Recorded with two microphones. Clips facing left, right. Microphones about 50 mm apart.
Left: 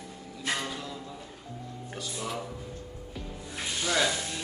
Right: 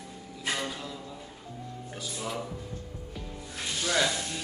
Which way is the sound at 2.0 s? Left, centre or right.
Centre.